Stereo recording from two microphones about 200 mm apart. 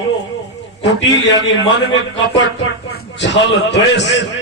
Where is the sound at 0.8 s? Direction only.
65° left (ahead or behind).